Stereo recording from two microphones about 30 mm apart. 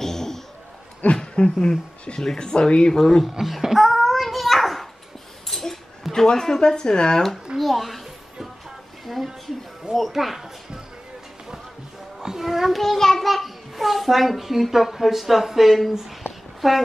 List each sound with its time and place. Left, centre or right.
0.0 s a sound: centre
1.1 s speech: left
2.9 s child singing: centre
3.3 s a sound: centre
6.2 s speech: centre
7.5 s a child's voice: centre
9.1 s child singing: centre
9.9 s a child's voice: centre
12.2 s a child's voice: centre
12.7 s child singing: centre
13.2 s a child's voice: centre